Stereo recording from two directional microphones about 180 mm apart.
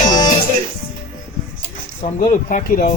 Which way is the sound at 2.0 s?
45° left (ahead or behind).